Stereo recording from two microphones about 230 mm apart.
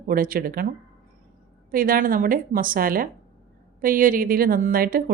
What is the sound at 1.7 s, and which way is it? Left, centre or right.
A woman's voice, right.